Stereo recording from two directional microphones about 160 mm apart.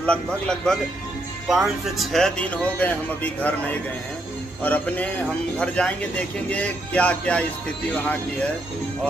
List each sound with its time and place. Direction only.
0.0 s speech: 5° left (ahead or behind)